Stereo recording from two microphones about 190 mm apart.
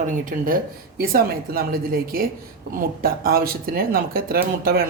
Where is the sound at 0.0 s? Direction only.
45° right (ahead or behind).